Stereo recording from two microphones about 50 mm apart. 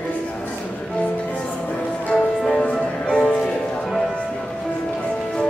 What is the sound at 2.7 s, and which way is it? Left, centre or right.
Music, centre.